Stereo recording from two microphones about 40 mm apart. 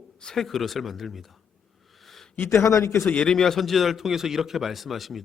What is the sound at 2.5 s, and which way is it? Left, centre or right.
Speech, left.